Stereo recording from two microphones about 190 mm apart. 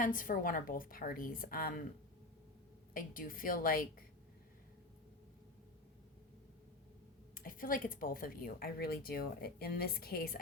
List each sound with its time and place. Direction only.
0.0 s speech: 45° left (ahead or behind)
2.9 s speech: 50° left (ahead or behind)
7.3 s speech: 45° left (ahead or behind)